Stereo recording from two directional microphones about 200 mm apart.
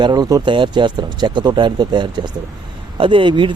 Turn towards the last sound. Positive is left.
turn(degrees=-25)  # may be behind; listen again after turning